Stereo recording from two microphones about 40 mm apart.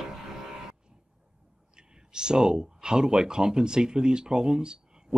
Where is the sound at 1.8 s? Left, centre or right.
Centre.